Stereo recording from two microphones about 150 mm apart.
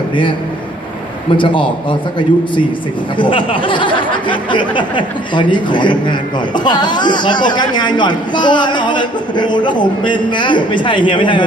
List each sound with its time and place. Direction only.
1.3 s speech: 35° left (ahead or behind)